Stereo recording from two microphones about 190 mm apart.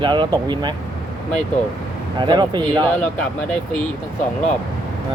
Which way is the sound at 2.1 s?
25° right (ahead or behind).